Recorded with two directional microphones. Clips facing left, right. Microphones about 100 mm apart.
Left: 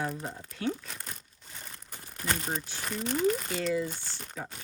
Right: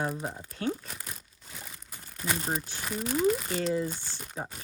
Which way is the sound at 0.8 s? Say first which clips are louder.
Even; 5° right (ahead or behind).